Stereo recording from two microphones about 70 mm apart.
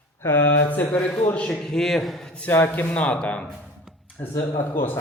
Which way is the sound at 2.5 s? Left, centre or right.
Left.